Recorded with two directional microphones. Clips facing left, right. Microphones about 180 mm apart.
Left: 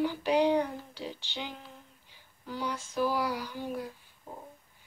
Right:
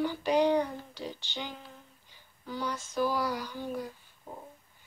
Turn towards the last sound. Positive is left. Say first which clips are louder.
# even
turn(degrees=5)  # may be behind; listen again after turning